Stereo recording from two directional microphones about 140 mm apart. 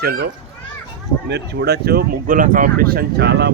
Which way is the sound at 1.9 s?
85° right.